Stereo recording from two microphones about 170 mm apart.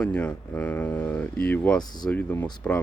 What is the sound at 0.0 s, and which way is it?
Speech, 5° left (ahead or behind).